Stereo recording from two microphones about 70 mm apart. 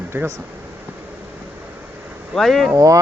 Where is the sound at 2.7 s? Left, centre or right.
Right.